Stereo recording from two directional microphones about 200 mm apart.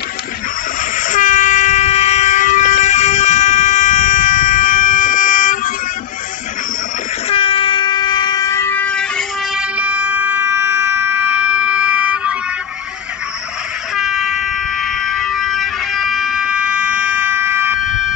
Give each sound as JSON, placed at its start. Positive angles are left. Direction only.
{"t": 0.9, "sound": "train", "side_deg": 40}
{"t": 7.2, "sound": "train", "side_deg": 25}
{"t": 9.6, "sound": "a sound", "side_deg": -10}
{"t": 13.9, "sound": "air horn", "side_deg": 0}
{"t": 15.0, "sound": "vehicle", "side_deg": 0}